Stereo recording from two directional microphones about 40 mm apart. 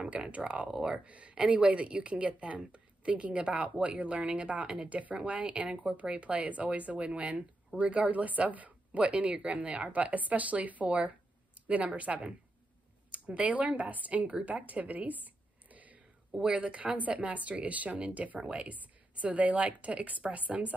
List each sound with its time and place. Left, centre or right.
0.3 s speech: right
0.7 s speech: centre
1.0 s a woman's voice: right
14.4 s a sound: right
16.5 s speech: right